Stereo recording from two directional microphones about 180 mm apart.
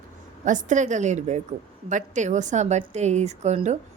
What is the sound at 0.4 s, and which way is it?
A woman's voice, 45° right (ahead or behind).